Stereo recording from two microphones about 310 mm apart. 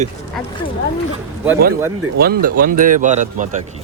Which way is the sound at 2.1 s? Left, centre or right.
Right.